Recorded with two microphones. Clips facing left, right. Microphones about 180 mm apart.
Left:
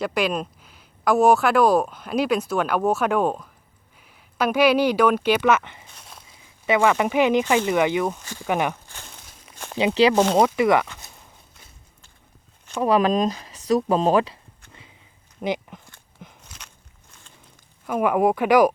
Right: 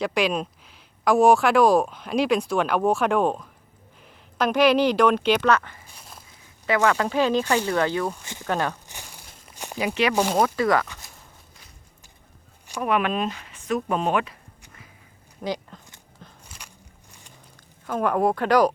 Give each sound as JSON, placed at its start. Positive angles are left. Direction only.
{"t": 0.0, "sound": "speech", "side_deg": 5}
{"t": 5.5, "sound": "speech", "side_deg": 20}
{"t": 5.9, "sound": "a sound", "side_deg": -5}
{"t": 6.7, "sound": "speech", "side_deg": 15}
{"t": 8.9, "sound": "a sound", "side_deg": -15}
{"t": 9.7, "sound": "speech", "side_deg": 25}
{"t": 12.8, "sound": "speech", "side_deg": 35}
{"t": 15.4, "sound": "speech", "side_deg": 20}
{"t": 16.4, "sound": "biting", "side_deg": -10}
{"t": 17.8, "sound": "speech", "side_deg": 10}